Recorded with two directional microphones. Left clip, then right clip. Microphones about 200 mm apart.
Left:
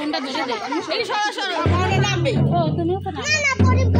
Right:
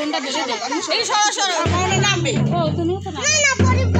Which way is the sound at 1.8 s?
45° right (ahead or behind).